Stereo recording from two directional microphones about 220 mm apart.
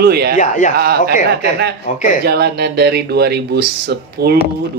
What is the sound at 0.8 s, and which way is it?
Speech, 45° right (ahead or behind).